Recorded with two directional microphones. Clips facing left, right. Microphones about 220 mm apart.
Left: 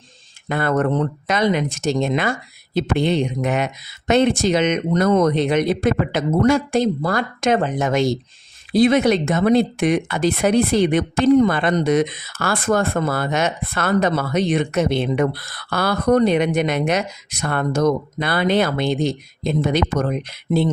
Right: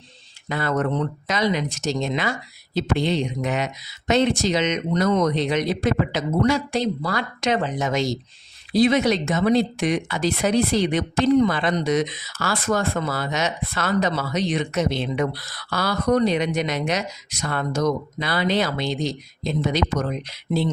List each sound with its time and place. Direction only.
0.4 s speech: 55° left (ahead or behind)